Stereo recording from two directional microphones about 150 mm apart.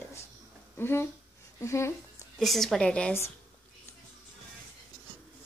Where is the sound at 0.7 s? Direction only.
15° left (ahead or behind).